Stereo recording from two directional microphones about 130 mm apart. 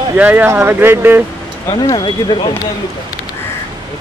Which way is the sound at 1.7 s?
30° left (ahead or behind).